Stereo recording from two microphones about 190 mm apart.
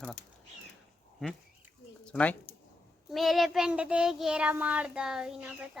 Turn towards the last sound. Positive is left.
turn(degrees=-5)  # may be behind; listen again after turning